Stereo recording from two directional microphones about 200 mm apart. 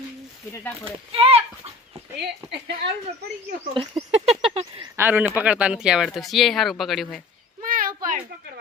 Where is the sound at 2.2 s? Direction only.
55° right (ahead or behind).